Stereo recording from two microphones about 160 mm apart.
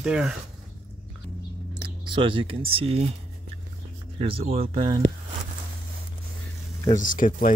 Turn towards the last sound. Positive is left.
turn(degrees=55)  # may be behind; listen again after turning